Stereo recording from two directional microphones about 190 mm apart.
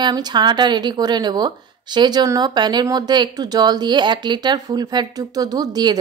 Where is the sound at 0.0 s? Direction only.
20° right (ahead or behind).